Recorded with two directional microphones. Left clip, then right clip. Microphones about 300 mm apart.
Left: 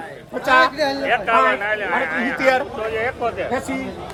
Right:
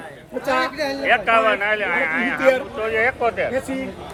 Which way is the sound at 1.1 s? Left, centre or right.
Right.